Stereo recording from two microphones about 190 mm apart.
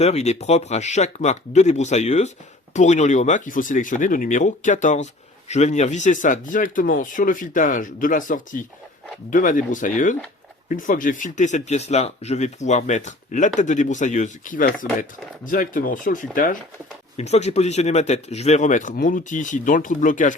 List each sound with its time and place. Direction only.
0.0 s speech: 35° left (ahead or behind)